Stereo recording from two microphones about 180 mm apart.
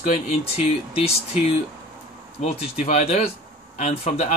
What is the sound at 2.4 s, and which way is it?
Speech, 35° left (ahead or behind).